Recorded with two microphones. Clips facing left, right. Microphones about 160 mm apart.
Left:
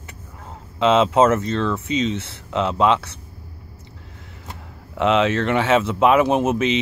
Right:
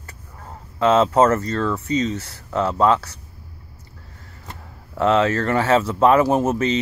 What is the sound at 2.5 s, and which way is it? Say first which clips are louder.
Speech: even; 15° left (ahead or behind).